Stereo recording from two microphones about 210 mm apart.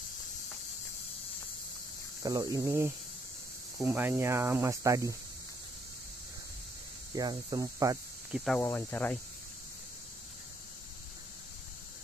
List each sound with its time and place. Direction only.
2.2 s speech: 15° right (ahead or behind)
7.2 s speech: 20° right (ahead or behind)
8.3 s speech: centre (ahead or behind)
8.5 s speech: 10° left (ahead or behind)